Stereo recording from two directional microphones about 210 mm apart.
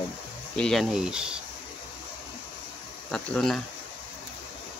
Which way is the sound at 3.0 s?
5° left (ahead or behind).